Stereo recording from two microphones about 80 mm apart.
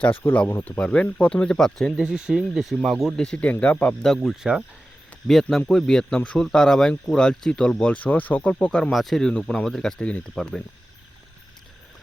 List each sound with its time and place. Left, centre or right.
0.2 s speech: left
0.6 s speech: centre
2.0 s speech: centre
3.2 s speech: centre
4.4 s speech: centre
5.3 s speech: centre
8.9 s speech: centre